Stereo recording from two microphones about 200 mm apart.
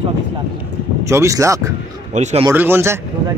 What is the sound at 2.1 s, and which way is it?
Speech, 35° right (ahead or behind).